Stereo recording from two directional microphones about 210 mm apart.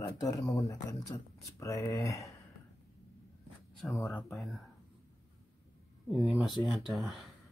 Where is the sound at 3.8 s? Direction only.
Centre (ahead or behind).